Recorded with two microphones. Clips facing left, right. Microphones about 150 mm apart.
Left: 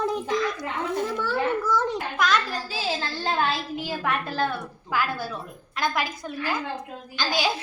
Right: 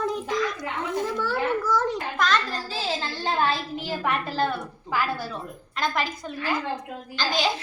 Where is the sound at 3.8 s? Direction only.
Centre (ahead or behind).